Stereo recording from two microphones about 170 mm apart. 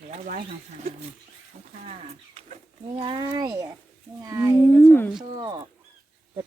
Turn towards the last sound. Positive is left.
turn(degrees=-25)  # may be behind; listen again after turning